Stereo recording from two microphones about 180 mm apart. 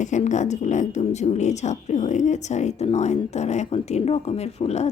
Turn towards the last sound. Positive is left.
turn(degrees=35)  # may be behind; listen again after turning